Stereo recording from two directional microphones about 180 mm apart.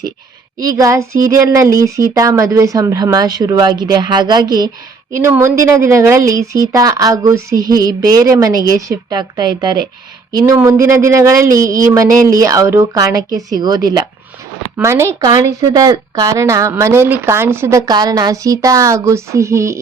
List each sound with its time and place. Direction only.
0.6 s a woman's voice: 20° right (ahead or behind)